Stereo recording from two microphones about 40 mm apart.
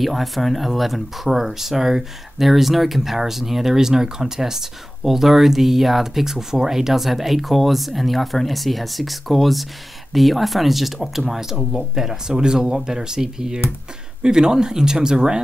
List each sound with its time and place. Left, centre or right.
0.0 s speech: centre